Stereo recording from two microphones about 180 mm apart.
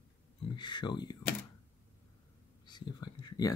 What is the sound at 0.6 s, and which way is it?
Speech, 25° left (ahead or behind).